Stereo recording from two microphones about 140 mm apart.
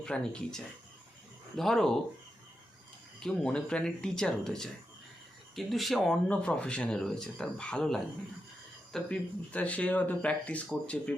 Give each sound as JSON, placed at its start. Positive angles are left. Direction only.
{"t": 0.0, "sound": "speech", "side_deg": 5}
{"t": 3.2, "sound": "speech", "side_deg": 5}